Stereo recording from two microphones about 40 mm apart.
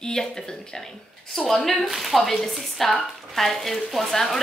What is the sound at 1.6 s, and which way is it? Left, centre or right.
Speech, centre.